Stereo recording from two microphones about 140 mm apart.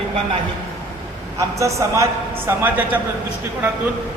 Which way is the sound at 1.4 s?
20° right (ahead or behind).